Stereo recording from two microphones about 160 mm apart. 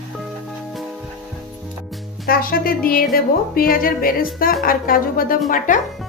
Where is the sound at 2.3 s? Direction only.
65° left (ahead or behind).